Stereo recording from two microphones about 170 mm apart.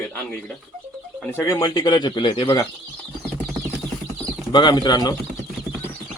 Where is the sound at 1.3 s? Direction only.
15° left (ahead or behind).